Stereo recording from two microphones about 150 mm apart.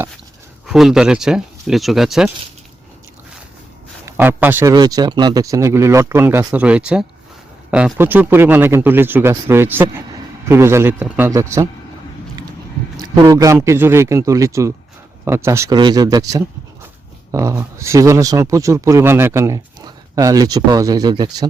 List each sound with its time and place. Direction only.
0.7 s speech: centre (ahead or behind)
4.0 s speech: 15° right (ahead or behind)
4.7 s a man's voice: 25° right (ahead or behind)
13.2 s speech: 20° right (ahead or behind)